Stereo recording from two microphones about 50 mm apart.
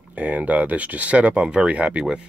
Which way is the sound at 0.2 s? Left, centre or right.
Right.